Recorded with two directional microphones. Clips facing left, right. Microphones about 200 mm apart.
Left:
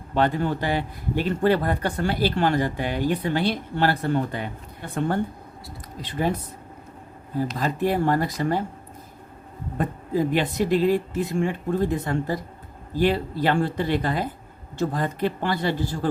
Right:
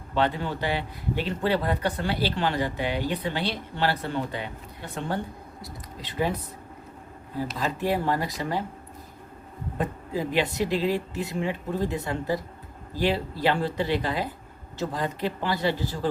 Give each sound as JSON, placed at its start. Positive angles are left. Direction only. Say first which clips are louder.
{"t": 0.1, "sound": "speech", "louder": "left 4 dB", "side_deg": 45}
{"t": 7.6, "sound": "speech", "louder": "left 3 dB", "side_deg": 50}
{"t": 9.7, "sound": "speech", "louder": "left 5 dB", "side_deg": 50}